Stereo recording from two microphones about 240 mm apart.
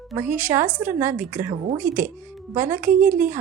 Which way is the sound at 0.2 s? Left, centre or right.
Centre.